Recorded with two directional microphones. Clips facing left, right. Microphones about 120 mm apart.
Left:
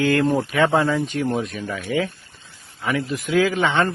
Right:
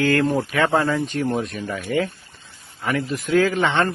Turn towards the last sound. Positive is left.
turn(degrees=0)  # may be behind; listen again after turning